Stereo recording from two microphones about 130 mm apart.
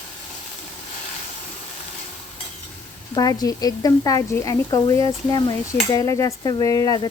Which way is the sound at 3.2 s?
30° left (ahead or behind).